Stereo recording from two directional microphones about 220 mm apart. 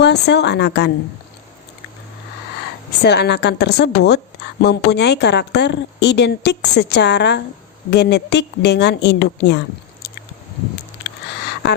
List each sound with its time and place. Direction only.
0.0 s speech: 50° left (ahead or behind)
3.0 s speech: 50° left (ahead or behind)
11.6 s a sound: 50° left (ahead or behind)